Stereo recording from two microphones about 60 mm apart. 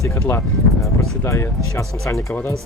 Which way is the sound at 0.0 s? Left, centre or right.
Left.